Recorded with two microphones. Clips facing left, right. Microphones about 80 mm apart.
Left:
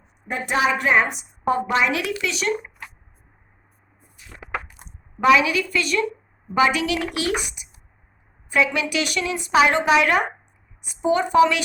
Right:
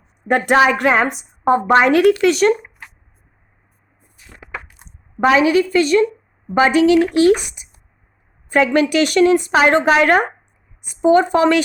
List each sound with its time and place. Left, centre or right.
0.3 s a woman's voice: right
1.1 s speech: right
5.2 s speech: right